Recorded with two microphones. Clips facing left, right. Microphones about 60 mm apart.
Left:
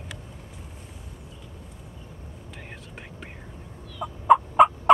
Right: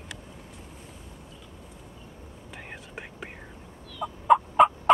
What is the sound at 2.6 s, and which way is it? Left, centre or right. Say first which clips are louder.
Whispering: right 3 dB; centre.